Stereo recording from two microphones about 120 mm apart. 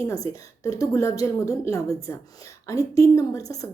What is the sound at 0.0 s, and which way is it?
A woman's voice, 30° left (ahead or behind).